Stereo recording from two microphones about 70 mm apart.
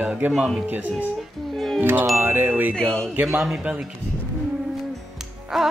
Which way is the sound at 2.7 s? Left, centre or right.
Centre.